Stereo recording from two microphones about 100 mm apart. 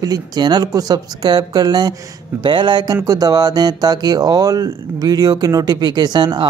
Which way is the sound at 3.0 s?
40° right (ahead or behind).